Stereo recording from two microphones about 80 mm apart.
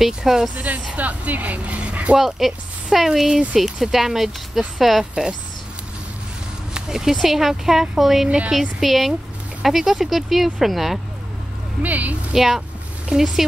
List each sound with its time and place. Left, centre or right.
0.0 s speech: centre
0.9 s speech: centre
2.1 s speech: centre
6.7 s speech: centre
11.8 s speech: centre
12.4 s speech: centre